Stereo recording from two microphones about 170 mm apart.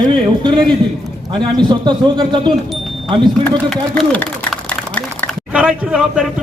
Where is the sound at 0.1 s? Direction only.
25° right (ahead or behind).